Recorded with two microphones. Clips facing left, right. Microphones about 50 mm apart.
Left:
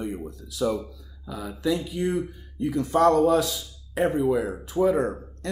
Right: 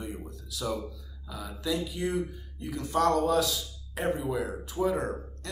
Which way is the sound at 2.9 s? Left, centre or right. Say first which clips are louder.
Left 5 dB; left.